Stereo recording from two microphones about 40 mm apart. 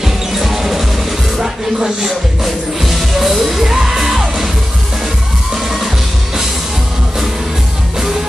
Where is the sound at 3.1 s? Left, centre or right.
Centre.